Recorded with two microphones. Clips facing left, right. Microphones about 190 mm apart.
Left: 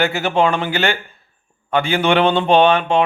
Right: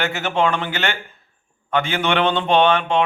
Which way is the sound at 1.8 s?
35° left (ahead or behind).